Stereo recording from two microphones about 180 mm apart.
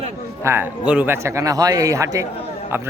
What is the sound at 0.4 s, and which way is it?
A man's voice, 10° right (ahead or behind).